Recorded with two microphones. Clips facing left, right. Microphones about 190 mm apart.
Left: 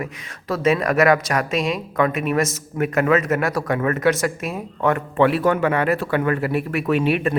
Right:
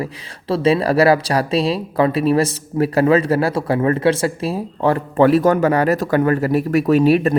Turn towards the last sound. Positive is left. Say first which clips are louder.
# right 6 dB
turn(degrees=-40)  # may be behind; listen again after turning